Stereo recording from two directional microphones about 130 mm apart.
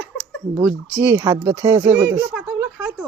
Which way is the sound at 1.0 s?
25° right (ahead or behind).